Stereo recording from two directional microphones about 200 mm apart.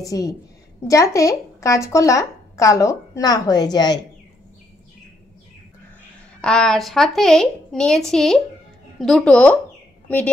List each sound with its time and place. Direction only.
0.0 s a woman's voice: 15° left (ahead or behind)
6.4 s a woman's voice: 5° left (ahead or behind)